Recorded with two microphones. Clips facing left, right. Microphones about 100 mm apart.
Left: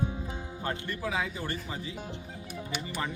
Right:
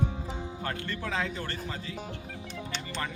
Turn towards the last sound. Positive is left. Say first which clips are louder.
# left 1 dB
turn(degrees=10)  # may be behind; listen again after turning